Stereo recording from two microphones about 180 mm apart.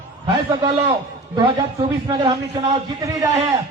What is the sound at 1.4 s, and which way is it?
A man's voice, 30° right (ahead or behind).